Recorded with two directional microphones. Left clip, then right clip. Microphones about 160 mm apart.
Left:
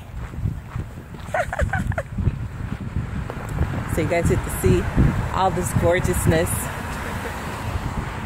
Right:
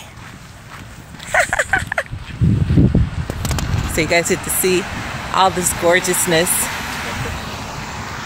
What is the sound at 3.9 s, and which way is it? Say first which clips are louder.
Speech: right 6 dB; 25° right (ahead or behind).